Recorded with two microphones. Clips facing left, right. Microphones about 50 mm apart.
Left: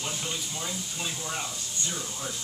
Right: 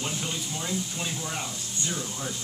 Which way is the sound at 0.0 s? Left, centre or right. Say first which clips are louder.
Right 2 dB; centre.